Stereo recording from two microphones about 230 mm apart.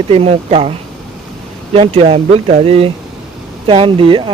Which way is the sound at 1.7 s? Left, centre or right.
Right.